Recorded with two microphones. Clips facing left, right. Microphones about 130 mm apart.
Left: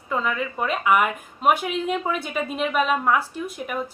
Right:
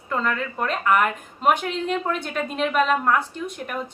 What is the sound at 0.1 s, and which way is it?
Speech, 5° left (ahead or behind).